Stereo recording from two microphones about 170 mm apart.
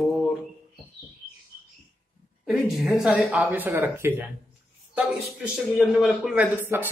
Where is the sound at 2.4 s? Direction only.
Centre (ahead or behind).